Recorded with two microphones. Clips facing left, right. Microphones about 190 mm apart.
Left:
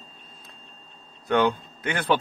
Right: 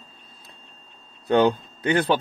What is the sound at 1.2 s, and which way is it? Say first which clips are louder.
Speech: right 3 dB; 35° right (ahead or behind).